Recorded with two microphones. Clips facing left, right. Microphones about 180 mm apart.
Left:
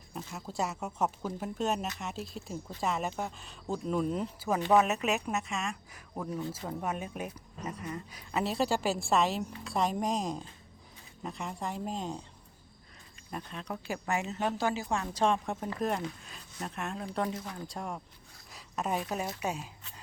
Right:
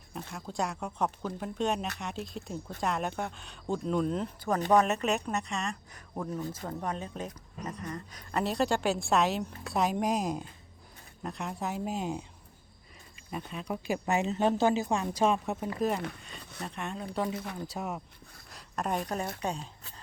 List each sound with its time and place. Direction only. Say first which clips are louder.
0.3 s speech: right 1 dB; 5° left (ahead or behind)
16.4 s speech: even; 65° right (ahead or behind)
16.6 s speech: even; centre (ahead or behind)